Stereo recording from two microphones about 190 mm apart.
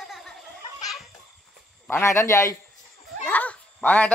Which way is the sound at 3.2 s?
5° left (ahead or behind).